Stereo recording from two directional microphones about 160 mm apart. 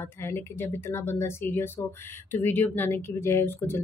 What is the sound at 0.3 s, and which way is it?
Speech, 15° left (ahead or behind).